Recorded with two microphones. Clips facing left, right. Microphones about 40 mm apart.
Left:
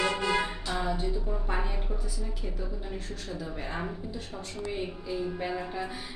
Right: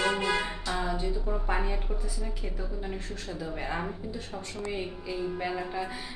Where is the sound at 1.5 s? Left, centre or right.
Centre.